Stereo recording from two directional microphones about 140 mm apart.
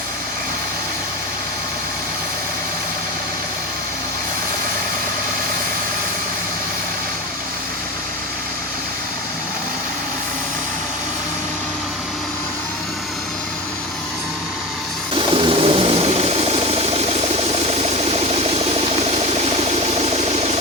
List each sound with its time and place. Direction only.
15.1 s engine: 40° right (ahead or behind)
20.0 s engine: 45° right (ahead or behind)